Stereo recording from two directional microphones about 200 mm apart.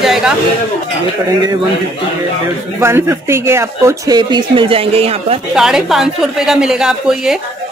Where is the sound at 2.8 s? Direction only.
10° right (ahead or behind); by 5.4 s 30° right (ahead or behind).